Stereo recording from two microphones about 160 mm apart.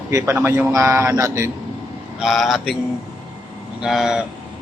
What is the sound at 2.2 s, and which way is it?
Mantra, centre (ahead or behind).